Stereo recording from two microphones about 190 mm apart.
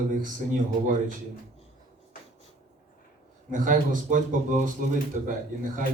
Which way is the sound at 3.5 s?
45° right (ahead or behind).